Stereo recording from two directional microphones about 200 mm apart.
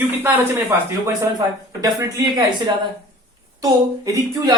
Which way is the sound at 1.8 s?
15° right (ahead or behind).